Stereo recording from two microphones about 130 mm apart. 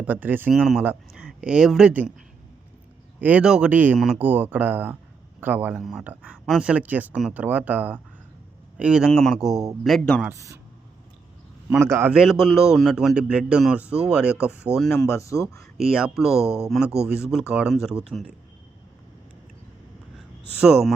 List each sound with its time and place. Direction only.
0.0 s speech: 10° right (ahead or behind)
0.5 s speech: centre (ahead or behind)
3.2 s speech: 10° right (ahead or behind)
3.9 s speech: centre (ahead or behind)
4.2 s speech: 15° right (ahead or behind)
5.7 s speech: centre (ahead or behind)
10.3 s a man's voice: 25° right (ahead or behind)
11.8 s a man's voice: 20° right (ahead or behind)
12.1 s speech: 5° right (ahead or behind)
14.8 s speech: 10° left (ahead or behind)
15.0 s speech: 25° left (ahead or behind)
15.5 s speech: 5° right (ahead or behind)
20.6 s speech: 5° right (ahead or behind)